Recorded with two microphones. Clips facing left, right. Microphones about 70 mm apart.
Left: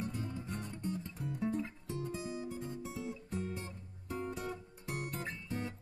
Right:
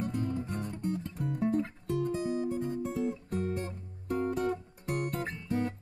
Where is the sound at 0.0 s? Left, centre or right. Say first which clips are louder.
Right 8 dB; right.